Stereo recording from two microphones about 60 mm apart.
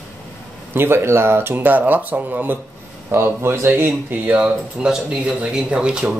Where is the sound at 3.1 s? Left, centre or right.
Right.